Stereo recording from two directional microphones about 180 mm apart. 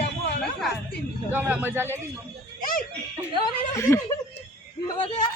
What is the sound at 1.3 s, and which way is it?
Speech, 10° right (ahead or behind).